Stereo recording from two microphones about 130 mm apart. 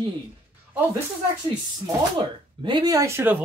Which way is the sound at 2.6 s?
35° right (ahead or behind).